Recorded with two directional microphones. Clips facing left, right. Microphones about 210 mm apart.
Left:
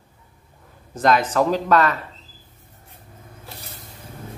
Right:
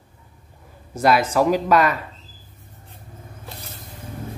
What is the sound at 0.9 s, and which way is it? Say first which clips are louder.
Speech: right 1 dB; 10° right (ahead or behind).